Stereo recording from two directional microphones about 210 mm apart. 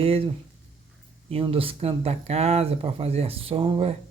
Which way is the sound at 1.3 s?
25° right (ahead or behind).